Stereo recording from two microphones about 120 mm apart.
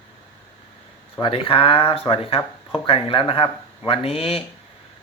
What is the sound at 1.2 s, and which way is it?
Speech, 50° left (ahead or behind).